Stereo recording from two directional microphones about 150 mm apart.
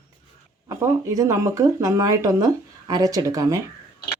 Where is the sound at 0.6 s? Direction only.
20° right (ahead or behind).